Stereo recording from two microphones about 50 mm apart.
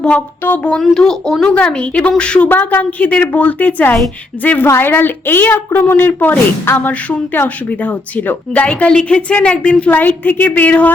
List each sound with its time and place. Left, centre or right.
0.9 s speech: centre
1.5 s a woman's voice: left
2.5 s a woman's voice: left
4.6 s a woman's voice: left
7.4 s a woman's voice: left
9.9 s a woman's voice: left